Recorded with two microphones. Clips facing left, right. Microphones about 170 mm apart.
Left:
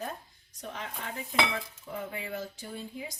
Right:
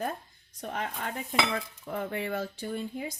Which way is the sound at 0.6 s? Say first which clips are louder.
Right 5 dB; 55° right (ahead or behind).